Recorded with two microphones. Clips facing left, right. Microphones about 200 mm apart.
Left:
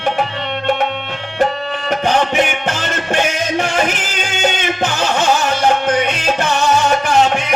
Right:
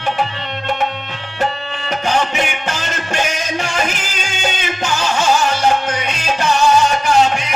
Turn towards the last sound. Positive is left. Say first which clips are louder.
# even
turn(degrees=55)  # may be behind; listen again after turning